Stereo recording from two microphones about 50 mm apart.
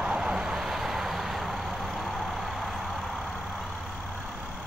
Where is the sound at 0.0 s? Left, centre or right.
Centre.